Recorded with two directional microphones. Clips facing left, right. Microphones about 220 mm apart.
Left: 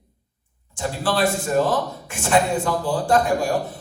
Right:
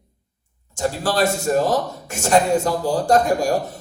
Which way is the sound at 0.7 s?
40° right (ahead or behind).